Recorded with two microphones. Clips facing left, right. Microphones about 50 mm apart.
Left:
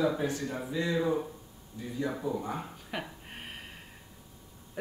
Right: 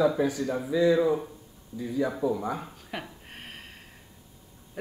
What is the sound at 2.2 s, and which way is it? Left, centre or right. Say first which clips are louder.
Speech: right 5 dB; right.